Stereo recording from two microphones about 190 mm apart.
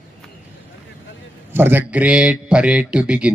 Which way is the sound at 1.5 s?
10° right (ahead or behind).